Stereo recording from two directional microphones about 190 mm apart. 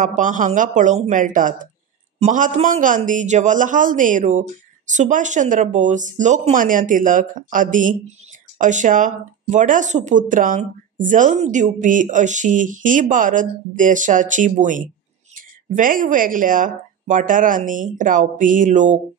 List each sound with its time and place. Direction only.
0.0 s speech: 40° right (ahead or behind)